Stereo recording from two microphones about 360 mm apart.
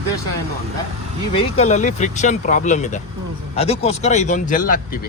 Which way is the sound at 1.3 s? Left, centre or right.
Centre.